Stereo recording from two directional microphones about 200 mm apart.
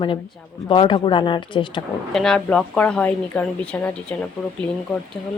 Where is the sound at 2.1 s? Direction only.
Centre (ahead or behind).